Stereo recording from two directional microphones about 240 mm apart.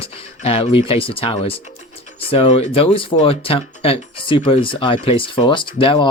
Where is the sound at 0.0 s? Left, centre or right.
Left.